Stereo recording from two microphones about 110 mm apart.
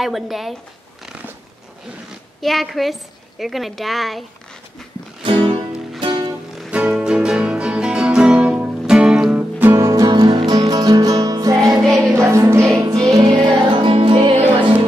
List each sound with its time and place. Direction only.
0.0 s a woman's voice: centre (ahead or behind)
1.0 s a sound: 10° right (ahead or behind)
2.4 s a woman's voice: centre (ahead or behind)
5.2 s music: 50° right (ahead or behind)
6.7 s music: 10° right (ahead or behind)
9.4 s music: 20° right (ahead or behind)
10.0 s music: 45° right (ahead or behind)
11.8 s music: centre (ahead or behind)
12.2 s music: 25° right (ahead or behind)
12.9 s music: 40° right (ahead or behind)